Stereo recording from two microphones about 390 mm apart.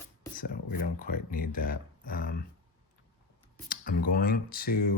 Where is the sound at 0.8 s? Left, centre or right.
Left.